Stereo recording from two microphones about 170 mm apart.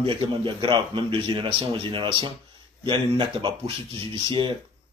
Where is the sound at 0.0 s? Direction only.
30° right (ahead or behind).